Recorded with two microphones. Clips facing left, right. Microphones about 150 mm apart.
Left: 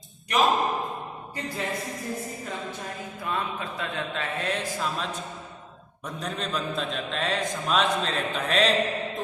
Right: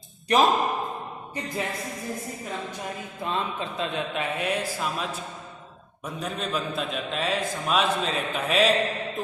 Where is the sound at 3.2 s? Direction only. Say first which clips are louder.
Right 2 dB; 25° right (ahead or behind).